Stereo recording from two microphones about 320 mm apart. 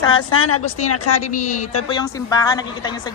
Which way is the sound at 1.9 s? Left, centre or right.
Centre.